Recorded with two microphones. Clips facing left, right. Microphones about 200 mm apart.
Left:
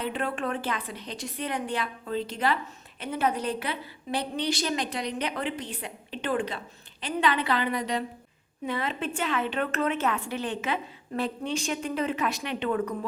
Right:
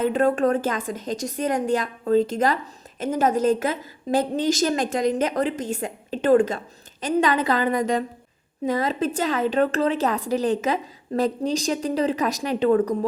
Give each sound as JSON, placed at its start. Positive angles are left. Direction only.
{"t": 0.0, "sound": "a woman's voice", "side_deg": -45}